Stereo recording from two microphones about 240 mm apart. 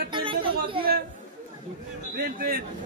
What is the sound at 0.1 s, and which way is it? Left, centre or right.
Chatter, right.